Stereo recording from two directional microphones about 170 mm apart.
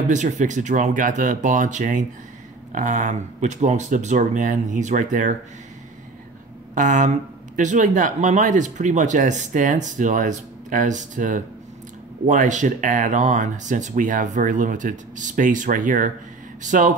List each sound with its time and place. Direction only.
0.1 s speech: 45° right (ahead or behind)
6.7 s speech: 50° right (ahead or behind)